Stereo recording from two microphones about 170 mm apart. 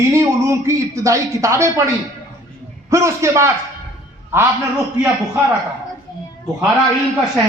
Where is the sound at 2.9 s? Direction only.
15° right (ahead or behind).